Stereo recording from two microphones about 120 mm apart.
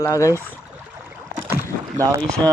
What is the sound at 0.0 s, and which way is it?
Speech, 25° left (ahead or behind).